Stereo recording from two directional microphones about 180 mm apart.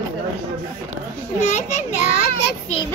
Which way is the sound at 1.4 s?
40° left (ahead or behind).